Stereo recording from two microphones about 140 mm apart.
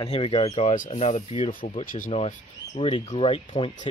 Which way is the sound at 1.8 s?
80° left.